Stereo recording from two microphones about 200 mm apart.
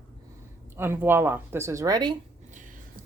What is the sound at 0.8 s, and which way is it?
A woman's voice, 10° right (ahead or behind).